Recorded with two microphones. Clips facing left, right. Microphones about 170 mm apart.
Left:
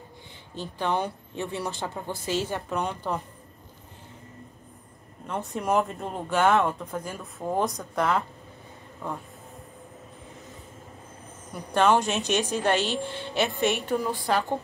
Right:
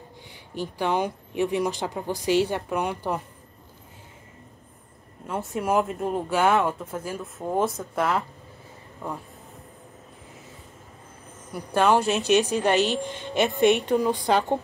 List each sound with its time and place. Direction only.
0.6 s speech: 15° right (ahead or behind)
5.2 s speech: 5° right (ahead or behind)
11.5 s speech: 5° right (ahead or behind)
13.6 s a woman's voice: 60° right (ahead or behind)
13.8 s a woman's voice: 20° right (ahead or behind)